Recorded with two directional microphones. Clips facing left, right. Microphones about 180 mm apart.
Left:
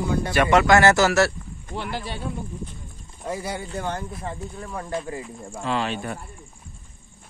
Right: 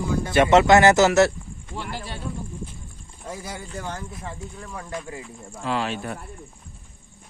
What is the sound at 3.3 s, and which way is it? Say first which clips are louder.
Speech: left 5 dB; 65° left (ahead or behind).